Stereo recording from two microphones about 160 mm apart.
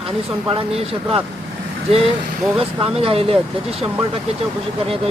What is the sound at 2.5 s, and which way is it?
Speech, 35° right (ahead or behind).